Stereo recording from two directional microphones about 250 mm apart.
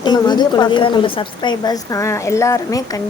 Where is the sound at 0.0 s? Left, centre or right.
Centre.